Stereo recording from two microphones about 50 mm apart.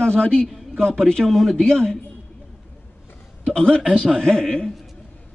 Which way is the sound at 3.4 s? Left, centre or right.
Centre.